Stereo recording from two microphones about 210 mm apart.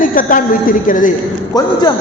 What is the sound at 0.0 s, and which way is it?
A woman's voice, 40° left (ahead or behind).